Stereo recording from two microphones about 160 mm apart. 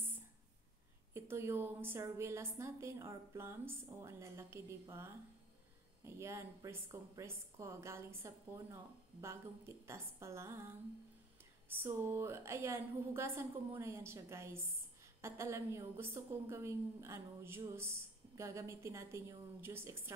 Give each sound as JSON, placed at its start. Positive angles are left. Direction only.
{"t": 1.1, "sound": "a woman's voice", "side_deg": -15}
{"t": 6.0, "sound": "a woman's voice", "side_deg": -15}